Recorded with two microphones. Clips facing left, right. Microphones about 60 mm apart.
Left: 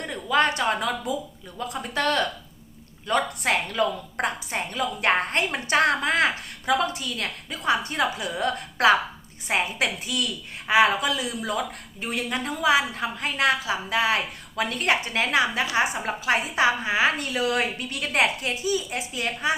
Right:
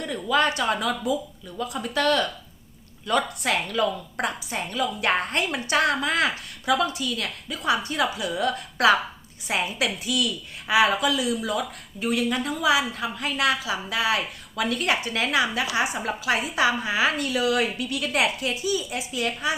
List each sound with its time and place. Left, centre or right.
0.0 s a woman's voice: left